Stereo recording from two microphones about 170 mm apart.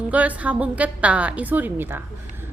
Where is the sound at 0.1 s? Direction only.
10° right (ahead or behind).